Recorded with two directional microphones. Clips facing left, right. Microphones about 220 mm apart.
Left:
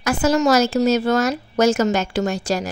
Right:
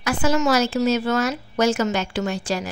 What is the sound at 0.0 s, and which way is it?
A woman's voice, 40° left (ahead or behind).